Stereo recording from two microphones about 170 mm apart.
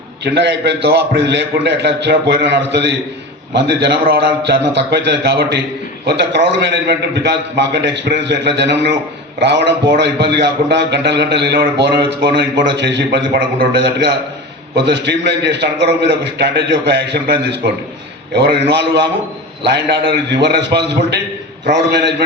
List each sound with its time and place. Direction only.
0.3 s a man's voice: 80° right